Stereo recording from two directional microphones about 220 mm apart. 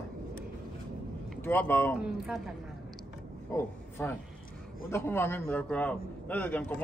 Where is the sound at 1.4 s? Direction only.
10° left (ahead or behind).